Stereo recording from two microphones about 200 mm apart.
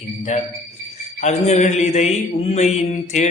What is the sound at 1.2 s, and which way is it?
Mantra, 35° left (ahead or behind).